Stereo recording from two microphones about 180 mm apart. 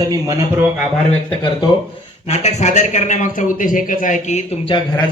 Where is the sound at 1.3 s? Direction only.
30° left (ahead or behind).